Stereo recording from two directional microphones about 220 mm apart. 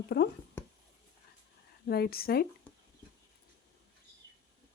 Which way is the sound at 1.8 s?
45° left (ahead or behind).